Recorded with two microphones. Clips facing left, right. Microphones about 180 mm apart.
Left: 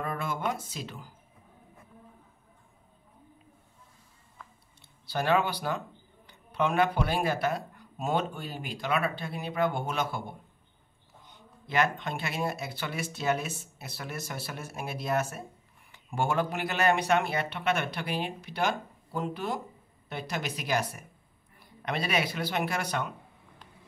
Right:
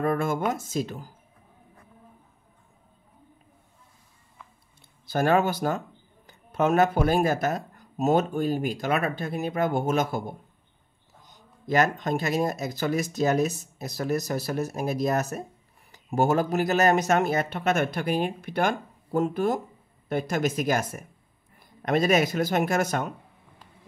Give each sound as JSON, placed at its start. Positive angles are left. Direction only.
{"t": 0.0, "sound": "a sound", "side_deg": -45}
{"t": 0.5, "sound": "speech", "side_deg": -45}
{"t": 5.0, "sound": "a man's voice", "side_deg": -45}